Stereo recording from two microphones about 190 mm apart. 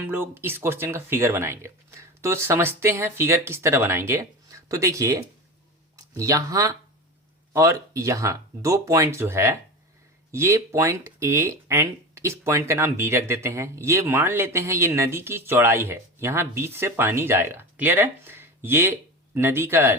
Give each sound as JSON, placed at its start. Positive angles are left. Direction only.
{"t": 0.0, "sound": "speech", "side_deg": -10}